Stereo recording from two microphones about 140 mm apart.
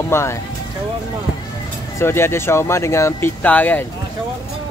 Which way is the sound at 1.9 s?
20° left (ahead or behind).